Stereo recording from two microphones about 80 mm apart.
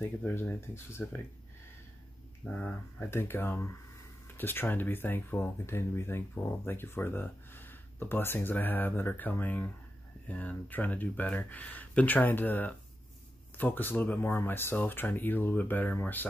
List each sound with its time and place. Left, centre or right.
0.2 s speech: left
2.4 s speech: centre
3.1 s speech: left